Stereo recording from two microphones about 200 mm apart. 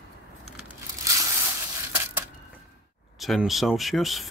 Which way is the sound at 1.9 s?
10° right (ahead or behind).